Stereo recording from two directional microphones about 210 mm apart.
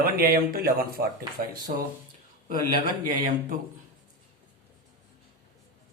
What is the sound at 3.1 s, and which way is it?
Speech, 40° right (ahead or behind).